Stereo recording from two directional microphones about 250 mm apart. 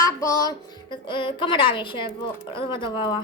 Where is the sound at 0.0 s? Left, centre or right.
Centre.